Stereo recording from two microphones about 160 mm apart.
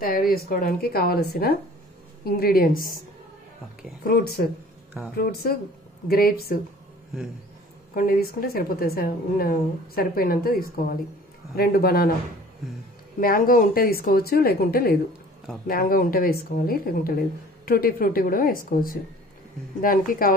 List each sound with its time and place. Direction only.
0.0 s a woman's voice: 65° left (ahead or behind)
4.0 s a woman's voice: 75° left (ahead or behind)
7.9 s a woman's voice: 65° left (ahead or behind)
13.2 s a woman's voice: 65° left (ahead or behind)